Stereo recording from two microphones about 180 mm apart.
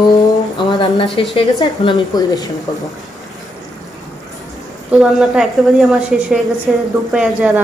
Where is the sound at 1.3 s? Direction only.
30° left (ahead or behind).